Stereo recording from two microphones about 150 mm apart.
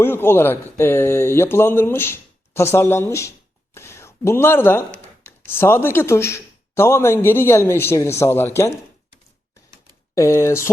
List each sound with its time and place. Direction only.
0.0 s speech: 15° left (ahead or behind)
10.2 s speech: 20° left (ahead or behind)